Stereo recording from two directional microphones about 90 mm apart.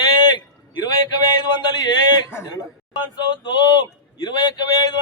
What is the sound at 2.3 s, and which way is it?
Speech, 25° left (ahead or behind).